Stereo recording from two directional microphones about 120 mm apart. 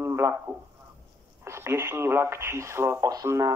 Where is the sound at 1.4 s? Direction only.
20° right (ahead or behind).